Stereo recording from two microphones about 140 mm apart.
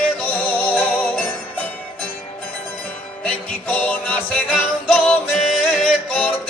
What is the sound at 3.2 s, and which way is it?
Music, 10° left (ahead or behind).